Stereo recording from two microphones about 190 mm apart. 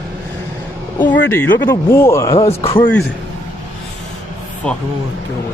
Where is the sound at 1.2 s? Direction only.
15° left (ahead or behind).